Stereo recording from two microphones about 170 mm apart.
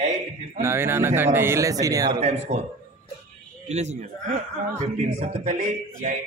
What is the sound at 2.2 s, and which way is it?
Speech, 40° right (ahead or behind).